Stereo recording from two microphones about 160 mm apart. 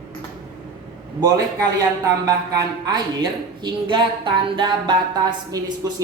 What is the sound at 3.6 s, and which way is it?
Speech, 30° right (ahead or behind).